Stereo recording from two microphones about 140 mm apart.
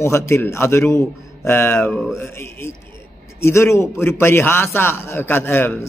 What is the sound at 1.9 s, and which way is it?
Speech, centre (ahead or behind).